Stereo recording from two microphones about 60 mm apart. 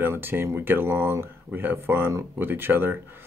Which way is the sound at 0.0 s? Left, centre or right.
Right.